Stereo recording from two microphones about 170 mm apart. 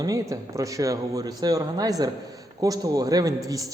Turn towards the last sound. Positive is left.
turn(degrees=-20)  # may be behind; listen again after turning